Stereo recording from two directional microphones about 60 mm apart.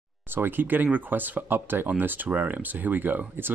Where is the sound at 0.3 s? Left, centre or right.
Right.